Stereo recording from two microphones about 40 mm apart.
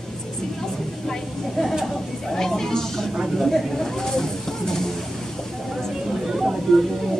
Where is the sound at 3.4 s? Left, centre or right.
Centre.